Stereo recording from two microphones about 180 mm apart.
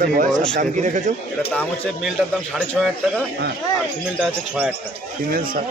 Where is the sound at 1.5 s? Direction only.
10° left (ahead or behind).